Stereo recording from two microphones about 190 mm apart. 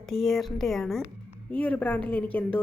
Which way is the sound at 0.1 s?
Centre (ahead or behind).